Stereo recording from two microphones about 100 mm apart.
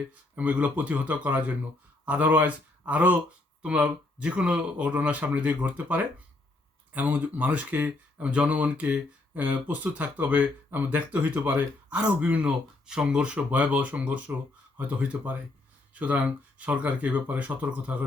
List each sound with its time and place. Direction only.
0.3 s speech: 15° right (ahead or behind)